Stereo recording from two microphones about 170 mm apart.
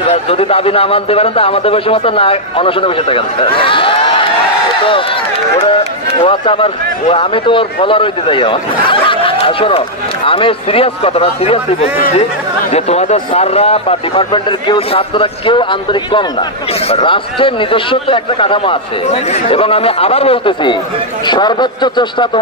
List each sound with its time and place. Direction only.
0.1 s a man's voice: 35° left (ahead or behind)
6.2 s a man's voice: 30° left (ahead or behind)